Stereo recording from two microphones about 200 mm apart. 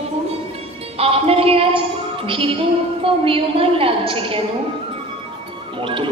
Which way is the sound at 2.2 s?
25° right (ahead or behind).